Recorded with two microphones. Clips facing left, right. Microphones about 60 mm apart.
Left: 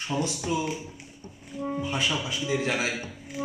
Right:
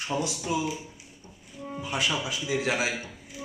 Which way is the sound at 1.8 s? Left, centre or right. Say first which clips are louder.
Right 1 dB; centre.